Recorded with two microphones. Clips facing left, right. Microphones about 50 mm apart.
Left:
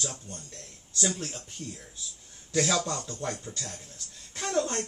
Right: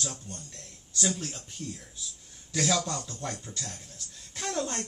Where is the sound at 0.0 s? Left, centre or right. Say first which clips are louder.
Even; centre.